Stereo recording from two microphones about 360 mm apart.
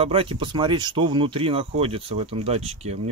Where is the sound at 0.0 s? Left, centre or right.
Centre.